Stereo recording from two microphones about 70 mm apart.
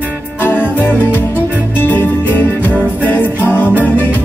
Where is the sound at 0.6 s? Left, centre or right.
Left.